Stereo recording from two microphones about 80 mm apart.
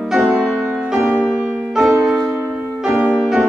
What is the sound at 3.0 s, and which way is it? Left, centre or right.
Music, centre.